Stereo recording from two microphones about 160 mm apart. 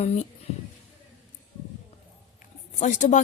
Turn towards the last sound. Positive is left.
turn(degrees=50)  # may be behind; listen again after turning